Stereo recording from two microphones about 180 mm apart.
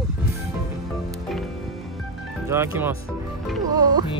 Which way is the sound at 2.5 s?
15° right (ahead or behind).